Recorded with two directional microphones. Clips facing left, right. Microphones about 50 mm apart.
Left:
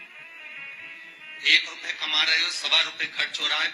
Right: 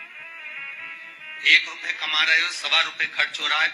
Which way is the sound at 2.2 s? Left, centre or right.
Right.